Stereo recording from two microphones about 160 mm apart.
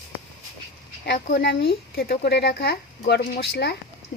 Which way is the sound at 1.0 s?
90° left.